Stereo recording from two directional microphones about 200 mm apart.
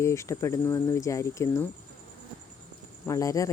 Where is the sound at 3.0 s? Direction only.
15° left (ahead or behind).